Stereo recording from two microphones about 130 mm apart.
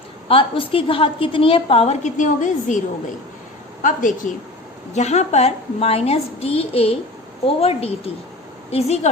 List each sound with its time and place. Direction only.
0.3 s a woman's voice: 45° left (ahead or behind)
2.0 s a woman's voice: 75° left (ahead or behind)
3.8 s a woman's voice: 75° left (ahead or behind)
4.9 s a woman's voice: 60° left (ahead or behind)